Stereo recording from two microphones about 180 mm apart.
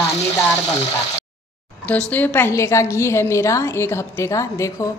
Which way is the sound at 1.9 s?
10° left (ahead or behind).